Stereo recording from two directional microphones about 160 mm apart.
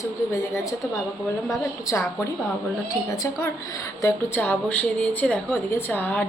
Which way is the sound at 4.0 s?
15° left (ahead or behind).